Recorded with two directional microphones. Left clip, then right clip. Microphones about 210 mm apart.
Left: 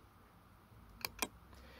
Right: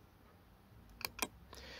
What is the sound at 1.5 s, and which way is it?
Vehicle, 35° right (ahead or behind).